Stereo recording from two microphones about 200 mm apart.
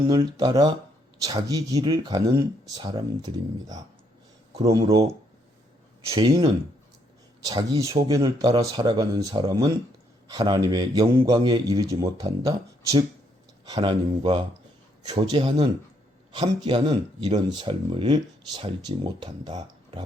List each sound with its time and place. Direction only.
0.1 s speech: 20° right (ahead or behind)
6.1 s speech: 25° right (ahead or behind)